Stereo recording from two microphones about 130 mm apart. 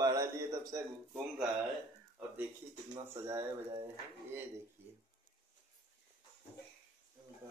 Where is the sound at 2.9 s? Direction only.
20° right (ahead or behind).